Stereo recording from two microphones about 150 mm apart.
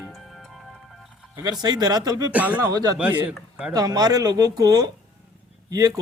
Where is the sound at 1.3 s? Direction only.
25° right (ahead or behind).